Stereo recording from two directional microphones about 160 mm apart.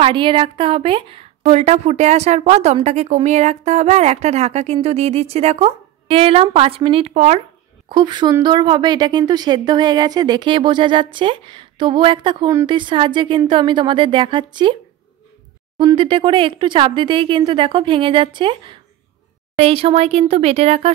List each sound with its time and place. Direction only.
0.0 s a woman's voice: 30° right (ahead or behind)
7.9 s a woman's voice: 30° right (ahead or behind)
15.8 s speech: 30° right (ahead or behind)